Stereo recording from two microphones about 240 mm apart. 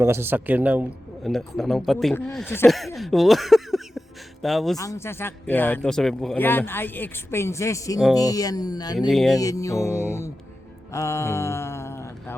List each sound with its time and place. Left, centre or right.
0.0 s a man's voice: centre
4.8 s speech: centre
9.0 s a man's voice: centre
9.4 s speech: centre
10.9 s mantra: centre